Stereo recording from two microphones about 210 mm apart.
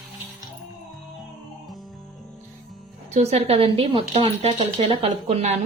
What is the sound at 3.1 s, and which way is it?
Speech, 30° right (ahead or behind).